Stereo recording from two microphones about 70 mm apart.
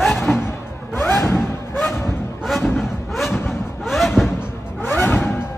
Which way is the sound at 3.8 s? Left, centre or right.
Centre.